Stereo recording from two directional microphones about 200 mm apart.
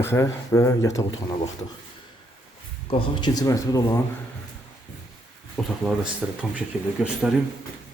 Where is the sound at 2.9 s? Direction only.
25° left (ahead or behind).